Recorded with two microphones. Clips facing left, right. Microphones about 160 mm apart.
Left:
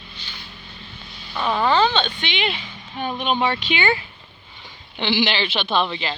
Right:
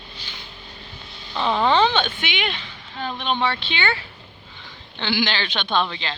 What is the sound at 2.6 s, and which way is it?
Speech, 15° left (ahead or behind).